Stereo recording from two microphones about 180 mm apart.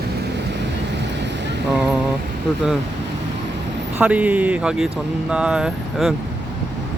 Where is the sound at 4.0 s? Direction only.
10° right (ahead or behind).